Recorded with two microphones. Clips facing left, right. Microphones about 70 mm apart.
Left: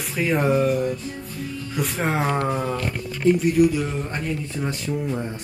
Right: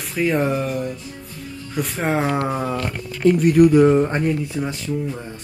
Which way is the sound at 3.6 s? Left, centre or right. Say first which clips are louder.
Right 7 dB; right.